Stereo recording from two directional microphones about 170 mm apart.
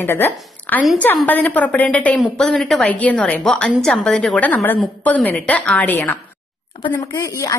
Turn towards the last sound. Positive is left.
turn(degrees=20)  # may be behind; listen again after turning